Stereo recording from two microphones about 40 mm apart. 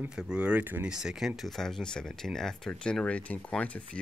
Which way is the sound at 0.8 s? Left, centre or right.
Centre.